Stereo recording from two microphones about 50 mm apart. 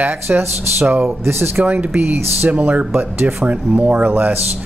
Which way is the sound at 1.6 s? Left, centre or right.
Right.